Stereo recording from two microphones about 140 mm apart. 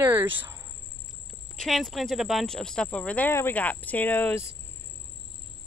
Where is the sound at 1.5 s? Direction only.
Centre (ahead or behind).